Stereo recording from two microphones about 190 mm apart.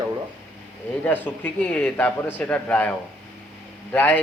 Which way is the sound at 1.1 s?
10° left (ahead or behind).